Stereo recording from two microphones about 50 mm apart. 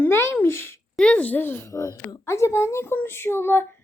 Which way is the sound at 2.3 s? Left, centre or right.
Left.